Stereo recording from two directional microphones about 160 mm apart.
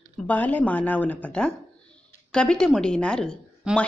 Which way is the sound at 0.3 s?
10° left (ahead or behind).